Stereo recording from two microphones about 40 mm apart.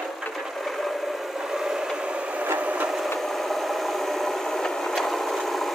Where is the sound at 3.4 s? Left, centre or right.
Centre.